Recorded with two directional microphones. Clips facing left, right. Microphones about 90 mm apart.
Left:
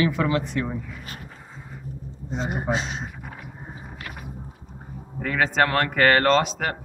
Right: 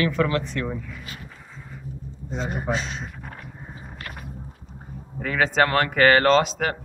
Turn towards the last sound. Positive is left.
turn(degrees=0)  # may be behind; listen again after turning